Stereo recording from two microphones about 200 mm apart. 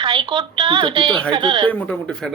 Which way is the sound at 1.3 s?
25° right (ahead or behind).